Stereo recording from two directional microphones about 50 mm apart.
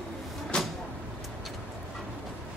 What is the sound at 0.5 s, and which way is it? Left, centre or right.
Vehicle, centre.